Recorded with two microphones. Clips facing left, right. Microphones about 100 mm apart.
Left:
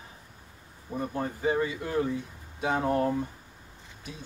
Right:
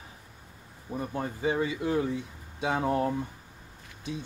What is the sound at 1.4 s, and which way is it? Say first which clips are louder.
Speech: even; 20° right (ahead or behind).